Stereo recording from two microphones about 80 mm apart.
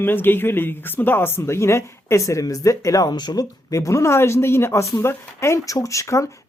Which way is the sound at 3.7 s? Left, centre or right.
Left.